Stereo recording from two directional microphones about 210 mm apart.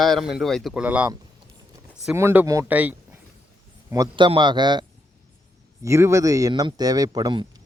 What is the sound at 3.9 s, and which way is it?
Speech, 20° right (ahead or behind).